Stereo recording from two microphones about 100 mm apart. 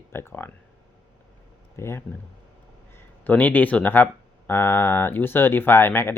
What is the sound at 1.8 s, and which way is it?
Speech, 25° left (ahead or behind).